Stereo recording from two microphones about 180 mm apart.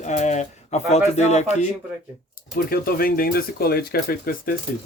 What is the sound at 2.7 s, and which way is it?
Speech, 55° left (ahead or behind).